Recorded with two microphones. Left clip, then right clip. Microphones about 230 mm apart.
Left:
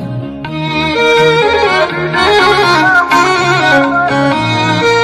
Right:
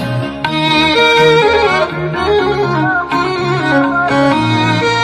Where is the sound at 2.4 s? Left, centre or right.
Left.